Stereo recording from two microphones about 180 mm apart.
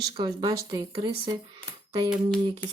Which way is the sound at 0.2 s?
20° right (ahead or behind).